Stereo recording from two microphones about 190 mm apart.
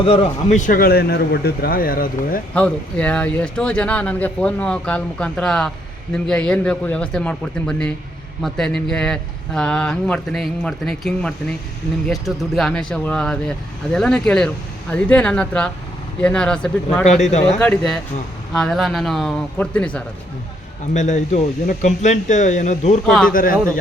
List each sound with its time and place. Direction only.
0.0 s a man's voice: 30° left (ahead or behind); by 2.4 s 50° left (ahead or behind)
2.6 s speech: 5° left (ahead or behind)
20.9 s a man's voice: 40° left (ahead or behind)
23.0 s speech: 5° left (ahead or behind)
23.3 s a man's voice: 50° left (ahead or behind)